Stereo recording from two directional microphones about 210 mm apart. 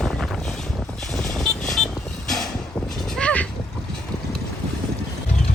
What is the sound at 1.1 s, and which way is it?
Vehicle, centre (ahead or behind).